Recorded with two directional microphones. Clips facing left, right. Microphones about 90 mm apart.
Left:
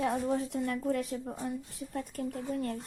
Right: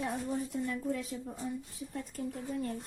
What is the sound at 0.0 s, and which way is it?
Speech, 90° left.